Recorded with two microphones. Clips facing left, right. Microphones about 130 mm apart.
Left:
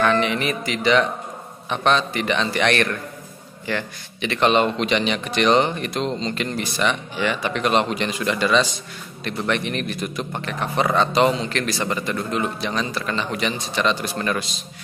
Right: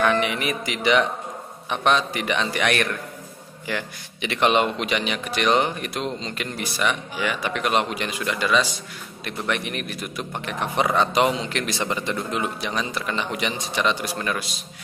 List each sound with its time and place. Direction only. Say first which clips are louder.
0.0 s a man's voice: left 2 dB; 10° right (ahead or behind)